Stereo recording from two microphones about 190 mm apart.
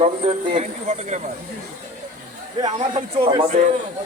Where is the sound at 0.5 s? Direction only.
40° right (ahead or behind).